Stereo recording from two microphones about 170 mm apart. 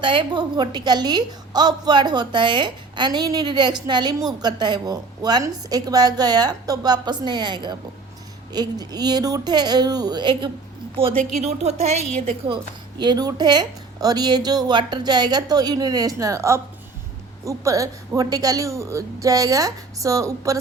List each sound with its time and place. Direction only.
0.0 s a woman's voice: 30° right (ahead or behind)
11.4 s a woman's voice: 40° right (ahead or behind)
13.0 s a woman's voice: 25° right (ahead or behind)